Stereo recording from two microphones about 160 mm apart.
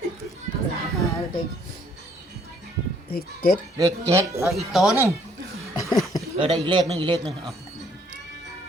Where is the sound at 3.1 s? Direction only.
70° left (ahead or behind).